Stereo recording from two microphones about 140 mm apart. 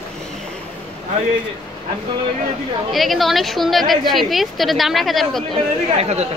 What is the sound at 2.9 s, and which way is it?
A woman's voice, centre (ahead or behind).